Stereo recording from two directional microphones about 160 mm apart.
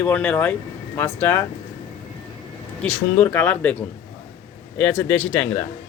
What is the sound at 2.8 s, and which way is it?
A man's voice, 10° left (ahead or behind).